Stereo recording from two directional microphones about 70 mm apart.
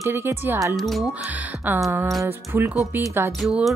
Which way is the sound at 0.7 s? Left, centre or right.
Centre.